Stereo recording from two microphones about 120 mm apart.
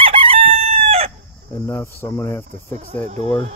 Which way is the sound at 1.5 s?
20° left (ahead or behind).